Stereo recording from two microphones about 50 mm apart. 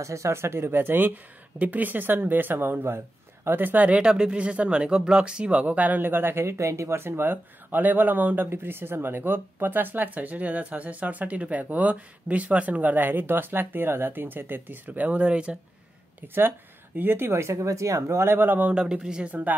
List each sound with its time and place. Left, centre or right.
0.0 s speech: right
4.0 s speech: centre; by 6.0 s right
6.0 s speech: right
7.0 s speech: right
8.5 s speech: right
14.9 s speech: right
16.3 s speech: right
18.0 s speech: right
18.7 s speech: centre